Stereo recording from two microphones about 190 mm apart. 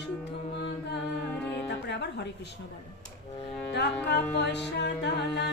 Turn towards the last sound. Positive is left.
turn(degrees=60)  # may be behind; listen again after turning